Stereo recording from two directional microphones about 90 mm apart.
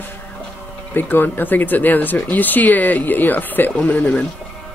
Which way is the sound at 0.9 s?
20° left (ahead or behind).